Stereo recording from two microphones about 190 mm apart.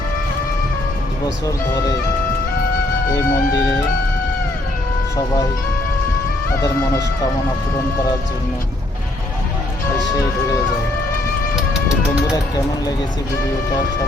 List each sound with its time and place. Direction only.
3.1 s speech: 20° left (ahead or behind)
9.9 s music: 20° left (ahead or behind)
11.9 s speech: 20° left (ahead or behind)